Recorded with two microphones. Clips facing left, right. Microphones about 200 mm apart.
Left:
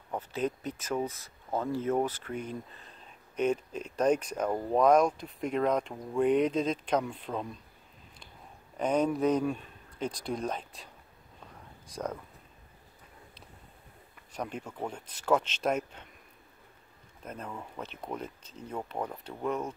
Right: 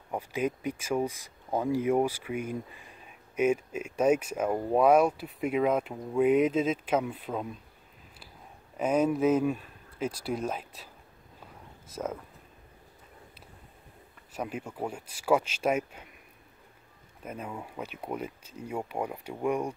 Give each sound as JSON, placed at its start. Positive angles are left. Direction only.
{"t": 0.1, "sound": "speech", "side_deg": -10}
{"t": 8.7, "sound": "speech", "side_deg": -5}
{"t": 11.9, "sound": "speech", "side_deg": -5}
{"t": 14.3, "sound": "speech", "side_deg": -5}
{"t": 17.2, "sound": "speech", "side_deg": -10}